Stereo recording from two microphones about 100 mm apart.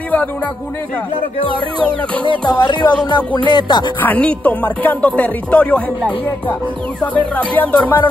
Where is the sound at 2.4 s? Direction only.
50° left (ahead or behind).